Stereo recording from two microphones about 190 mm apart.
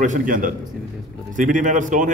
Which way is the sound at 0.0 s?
45° right (ahead or behind).